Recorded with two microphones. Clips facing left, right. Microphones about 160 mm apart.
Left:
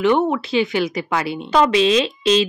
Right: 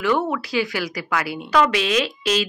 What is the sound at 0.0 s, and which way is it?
Speech, 25° left (ahead or behind).